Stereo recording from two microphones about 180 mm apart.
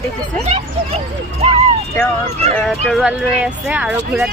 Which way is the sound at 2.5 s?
Centre (ahead or behind).